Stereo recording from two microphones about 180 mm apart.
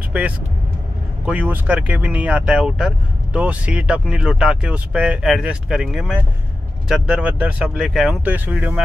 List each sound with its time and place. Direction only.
0.1 s speech: 5° right (ahead or behind)